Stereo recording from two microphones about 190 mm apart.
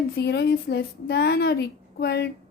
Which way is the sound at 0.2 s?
65° left (ahead or behind).